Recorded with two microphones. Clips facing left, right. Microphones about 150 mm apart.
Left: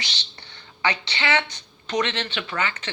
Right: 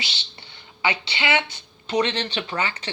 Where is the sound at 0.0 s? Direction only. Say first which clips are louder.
Right 1 dB; 25° right (ahead or behind).